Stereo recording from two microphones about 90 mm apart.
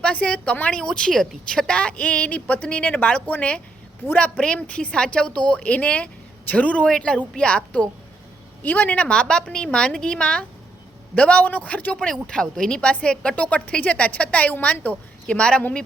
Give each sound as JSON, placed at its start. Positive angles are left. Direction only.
{"t": 0.0, "sound": "a woman's voice", "side_deg": 15}